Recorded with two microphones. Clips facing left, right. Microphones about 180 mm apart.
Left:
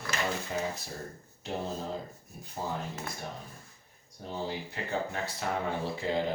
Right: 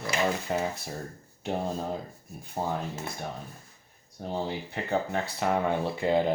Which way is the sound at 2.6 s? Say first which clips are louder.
Right 5 dB; 60° right (ahead or behind).